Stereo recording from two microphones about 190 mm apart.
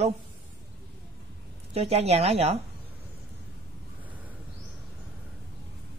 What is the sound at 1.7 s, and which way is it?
Speech, 35° right (ahead or behind).